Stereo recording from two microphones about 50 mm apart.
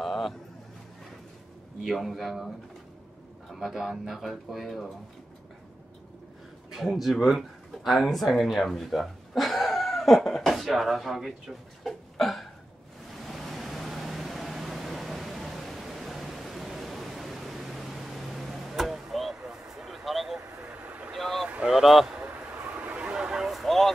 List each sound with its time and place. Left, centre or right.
0.0 s a sound: centre
2.0 s speech: centre
3.5 s speech: centre
6.7 s speech: centre
13.1 s a sound: centre
20.6 s vehicle: right
21.1 s boat: centre
21.6 s a sound: centre
22.3 s vehicle: right; by 23.9 s centre